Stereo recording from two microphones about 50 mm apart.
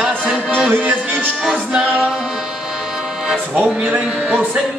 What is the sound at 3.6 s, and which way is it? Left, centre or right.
Music, right.